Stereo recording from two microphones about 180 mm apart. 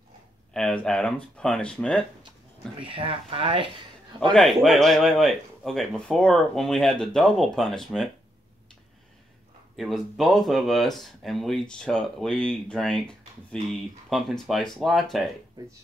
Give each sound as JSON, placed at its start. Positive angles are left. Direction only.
{"t": 0.5, "sound": "speech", "side_deg": 5}
{"t": 2.8, "sound": "speech", "side_deg": -30}
{"t": 4.3, "sound": "speech", "side_deg": 0}
{"t": 9.8, "sound": "speech", "side_deg": 0}